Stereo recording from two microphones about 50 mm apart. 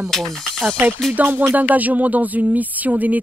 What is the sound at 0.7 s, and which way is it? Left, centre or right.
Speech, right.